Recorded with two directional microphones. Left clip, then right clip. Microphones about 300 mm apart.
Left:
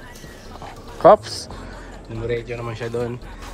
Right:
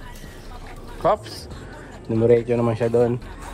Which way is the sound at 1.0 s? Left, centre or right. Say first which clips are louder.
Left 9 dB; centre.